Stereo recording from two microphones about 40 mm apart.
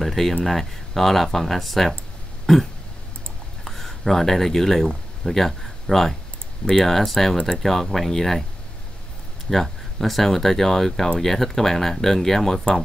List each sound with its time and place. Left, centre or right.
0.0 s speech: centre
2.4 s burping: centre
3.6 s speech: centre
9.5 s speech: centre